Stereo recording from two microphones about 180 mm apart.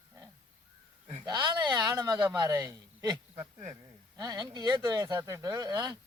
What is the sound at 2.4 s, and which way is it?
Speech, 20° right (ahead or behind).